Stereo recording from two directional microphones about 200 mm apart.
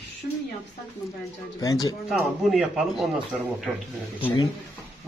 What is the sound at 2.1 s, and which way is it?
Speech, centre (ahead or behind).